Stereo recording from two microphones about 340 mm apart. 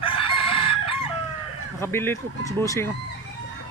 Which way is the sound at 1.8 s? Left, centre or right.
Centre.